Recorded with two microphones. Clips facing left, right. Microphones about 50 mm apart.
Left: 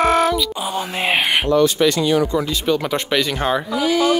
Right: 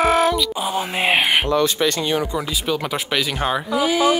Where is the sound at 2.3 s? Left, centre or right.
Centre.